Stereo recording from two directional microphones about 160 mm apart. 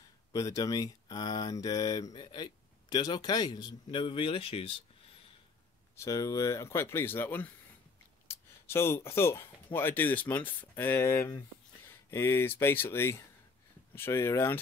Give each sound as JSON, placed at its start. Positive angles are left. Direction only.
{"t": 0.3, "sound": "speech", "side_deg": 20}
{"t": 5.9, "sound": "speech", "side_deg": 20}